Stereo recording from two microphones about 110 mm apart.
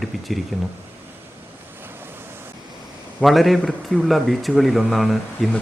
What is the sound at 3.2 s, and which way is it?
Speech, centre (ahead or behind).